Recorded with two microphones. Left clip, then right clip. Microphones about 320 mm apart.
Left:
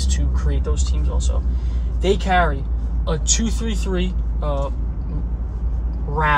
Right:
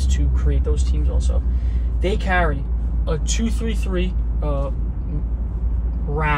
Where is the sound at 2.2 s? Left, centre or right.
Centre.